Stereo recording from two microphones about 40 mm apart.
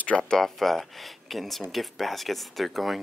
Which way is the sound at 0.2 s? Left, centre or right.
Centre.